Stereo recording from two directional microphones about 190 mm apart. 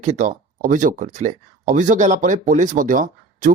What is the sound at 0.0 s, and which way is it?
Speech, 40° right (ahead or behind).